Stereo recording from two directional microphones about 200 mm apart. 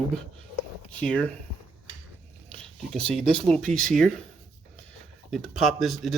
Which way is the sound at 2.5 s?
5° left (ahead or behind).